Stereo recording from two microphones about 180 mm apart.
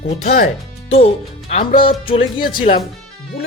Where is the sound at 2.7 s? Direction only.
40° left (ahead or behind).